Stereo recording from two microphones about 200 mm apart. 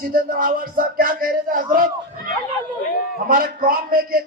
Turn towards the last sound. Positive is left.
turn(degrees=-45)  # may be behind; listen again after turning